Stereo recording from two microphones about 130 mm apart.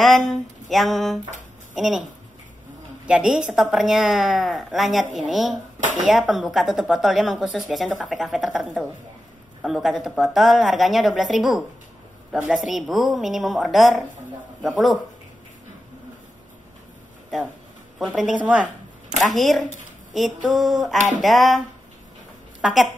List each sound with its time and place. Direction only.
0.0 s speech: centre (ahead or behind)
3.1 s speech: 5° right (ahead or behind)
17.9 s a woman's voice: centre (ahead or behind)
19.1 s a woman's voice: centre (ahead or behind)